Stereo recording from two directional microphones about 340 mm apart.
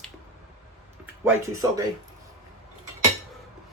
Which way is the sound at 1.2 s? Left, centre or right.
Centre.